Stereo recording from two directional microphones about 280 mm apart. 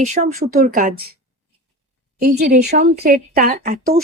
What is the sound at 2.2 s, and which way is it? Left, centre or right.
Speech, right.